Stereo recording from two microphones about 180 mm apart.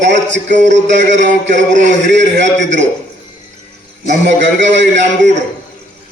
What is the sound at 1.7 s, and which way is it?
Speech, 40° right (ahead or behind).